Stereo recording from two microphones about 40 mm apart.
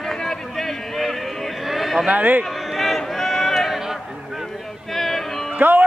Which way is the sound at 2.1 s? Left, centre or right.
Right.